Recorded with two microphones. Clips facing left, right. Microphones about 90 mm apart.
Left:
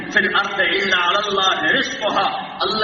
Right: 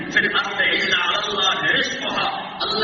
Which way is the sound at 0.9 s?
35° left (ahead or behind).